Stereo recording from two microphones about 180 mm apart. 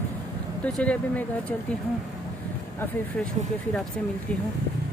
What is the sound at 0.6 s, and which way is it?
Speech, 5° left (ahead or behind).